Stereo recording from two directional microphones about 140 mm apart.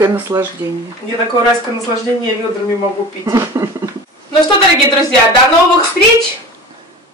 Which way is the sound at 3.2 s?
20° right (ahead or behind).